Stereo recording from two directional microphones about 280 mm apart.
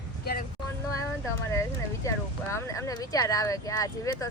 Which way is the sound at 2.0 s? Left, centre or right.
Centre.